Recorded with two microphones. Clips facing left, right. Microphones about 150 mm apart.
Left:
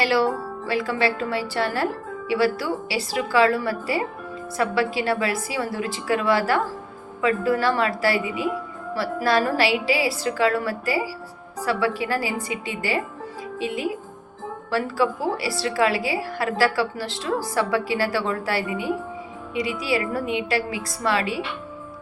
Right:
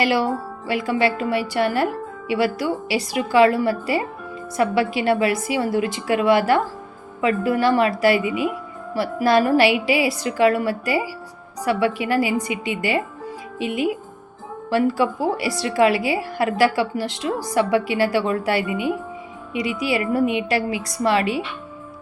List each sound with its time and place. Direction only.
0.0 s a woman's voice: 15° right (ahead or behind)